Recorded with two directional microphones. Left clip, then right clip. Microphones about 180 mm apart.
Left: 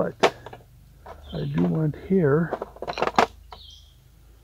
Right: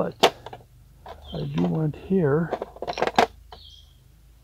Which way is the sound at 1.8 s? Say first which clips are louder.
Left 2 dB; 10° left (ahead or behind).